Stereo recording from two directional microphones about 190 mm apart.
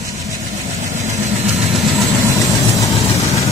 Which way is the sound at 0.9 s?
35° right (ahead or behind).